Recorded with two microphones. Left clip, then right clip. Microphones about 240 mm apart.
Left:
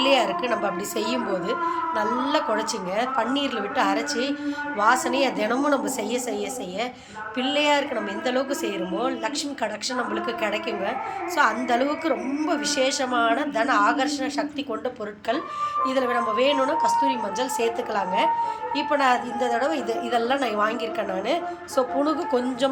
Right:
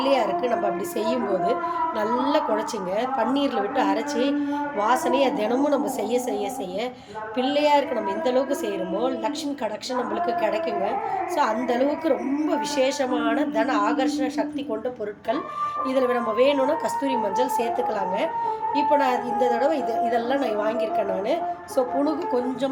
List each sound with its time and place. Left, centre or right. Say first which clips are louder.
0.0 s a woman's voice: left 1 dB; centre
7.3 s a woman's voice: right 2 dB; centre
11.3 s a woman's voice: left 2 dB; centre
16.0 s a woman's voice: right 4 dB; centre